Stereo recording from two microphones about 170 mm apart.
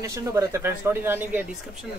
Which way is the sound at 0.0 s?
15° right (ahead or behind).